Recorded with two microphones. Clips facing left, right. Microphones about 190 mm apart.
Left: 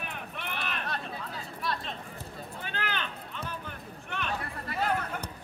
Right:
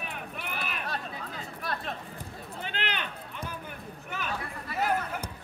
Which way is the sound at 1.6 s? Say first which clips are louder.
Even; 50° right (ahead or behind).